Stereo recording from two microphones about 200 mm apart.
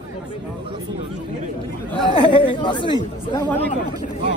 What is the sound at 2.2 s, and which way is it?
Speech, 25° left (ahead or behind).